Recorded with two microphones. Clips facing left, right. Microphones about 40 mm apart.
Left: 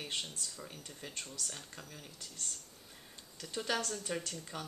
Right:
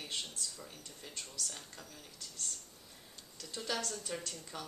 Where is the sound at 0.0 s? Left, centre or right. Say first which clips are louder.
Left 1 dB; centre.